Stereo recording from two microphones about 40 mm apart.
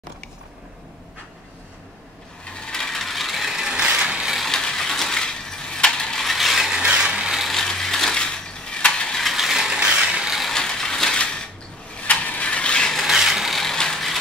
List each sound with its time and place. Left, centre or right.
2.4 s ratchet: left; by 3.6 s centre
3.6 s a sound: right
4.5 s a sound: centre
6.2 s ratchet: centre
6.7 s ratchet: right
7.5 s ratchet: centre
8.2 s mechanisms: left
9.1 s ratchet: centre
9.8 s ratchet: right
10.5 s ratchet: centre
11.1 s a sound: left
12.0 s ratchet: left
13.0 s mechanisms: centre
13.6 s ratchet: centre